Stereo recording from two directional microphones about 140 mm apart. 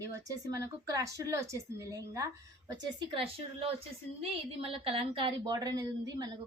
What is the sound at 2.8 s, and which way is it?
A woman's voice, 35° right (ahead or behind).